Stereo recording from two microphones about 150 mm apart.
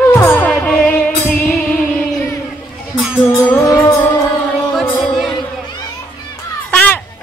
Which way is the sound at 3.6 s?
20° left (ahead or behind).